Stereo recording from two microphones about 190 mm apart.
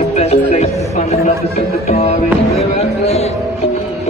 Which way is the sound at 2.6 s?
35° left (ahead or behind).